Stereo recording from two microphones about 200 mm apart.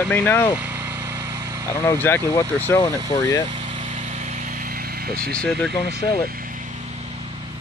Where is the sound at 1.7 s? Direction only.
15° left (ahead or behind).